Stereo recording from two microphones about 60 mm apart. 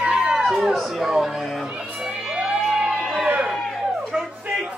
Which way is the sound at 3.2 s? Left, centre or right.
Centre.